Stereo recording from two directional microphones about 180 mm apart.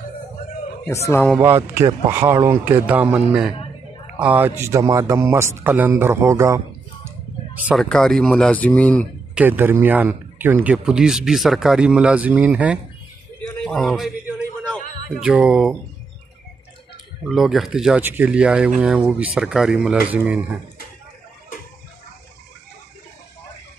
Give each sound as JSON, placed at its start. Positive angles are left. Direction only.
{"t": 0.8, "sound": "speech", "side_deg": 15}
{"t": 1.4, "sound": "speech", "side_deg": -15}
{"t": 9.3, "sound": "speech", "side_deg": -10}
{"t": 13.6, "sound": "a sound", "side_deg": 5}
{"t": 15.2, "sound": "speech", "side_deg": -5}
{"t": 17.3, "sound": "speech", "side_deg": 0}